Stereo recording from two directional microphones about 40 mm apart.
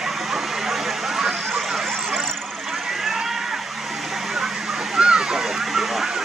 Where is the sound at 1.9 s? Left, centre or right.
Centre.